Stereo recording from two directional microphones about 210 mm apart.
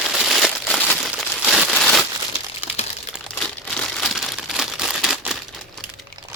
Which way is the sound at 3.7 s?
Centre (ahead or behind).